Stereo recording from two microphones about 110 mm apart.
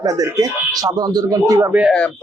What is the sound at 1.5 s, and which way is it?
Speech, 20° right (ahead or behind).